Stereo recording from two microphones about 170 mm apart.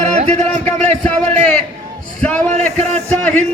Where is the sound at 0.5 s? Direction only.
10° left (ahead or behind).